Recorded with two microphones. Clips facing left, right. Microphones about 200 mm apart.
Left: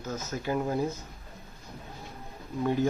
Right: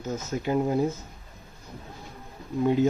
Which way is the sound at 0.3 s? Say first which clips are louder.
Right 5 dB; 20° right (ahead or behind).